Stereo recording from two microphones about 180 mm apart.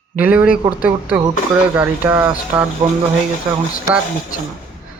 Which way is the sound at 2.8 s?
25° right (ahead or behind).